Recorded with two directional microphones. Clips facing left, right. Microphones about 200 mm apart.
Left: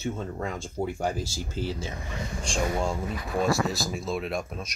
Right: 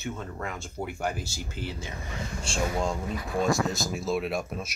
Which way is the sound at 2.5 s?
10° left (ahead or behind).